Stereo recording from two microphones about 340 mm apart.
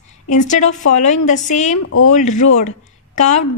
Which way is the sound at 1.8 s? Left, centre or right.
Left.